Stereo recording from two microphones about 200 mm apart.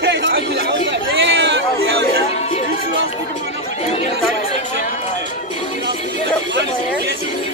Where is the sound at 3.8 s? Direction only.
35° left (ahead or behind).